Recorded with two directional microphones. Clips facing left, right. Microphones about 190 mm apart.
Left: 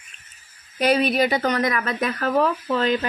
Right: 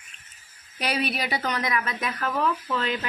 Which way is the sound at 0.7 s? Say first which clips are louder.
Left 9 dB; 45° left (ahead or behind).